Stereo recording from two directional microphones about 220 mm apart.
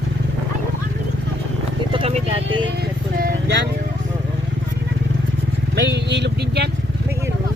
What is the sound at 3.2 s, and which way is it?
Vehicle, 50° right (ahead or behind).